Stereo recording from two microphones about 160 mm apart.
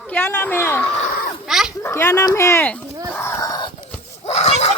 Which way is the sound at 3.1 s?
15° left (ahead or behind).